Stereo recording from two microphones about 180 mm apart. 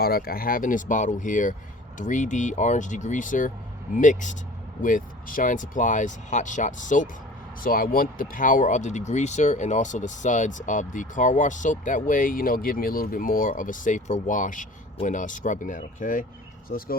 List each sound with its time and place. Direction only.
0.0 s speech: 55° left (ahead or behind)